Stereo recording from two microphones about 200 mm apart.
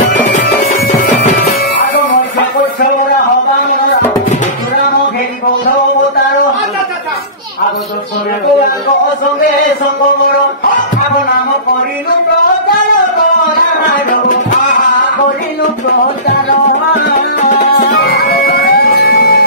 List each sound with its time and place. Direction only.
0.3 s music: 40° left (ahead or behind)
17.4 s music: 40° left (ahead or behind)
17.9 s music: 55° left (ahead or behind)